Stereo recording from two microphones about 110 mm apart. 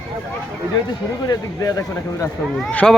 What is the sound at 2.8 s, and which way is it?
Speech, 5° left (ahead or behind).